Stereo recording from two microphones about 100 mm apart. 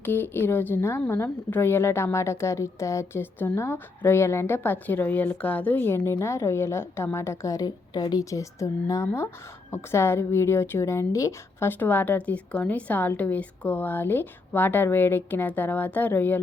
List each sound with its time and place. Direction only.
0.0 s a woman's voice: 20° left (ahead or behind)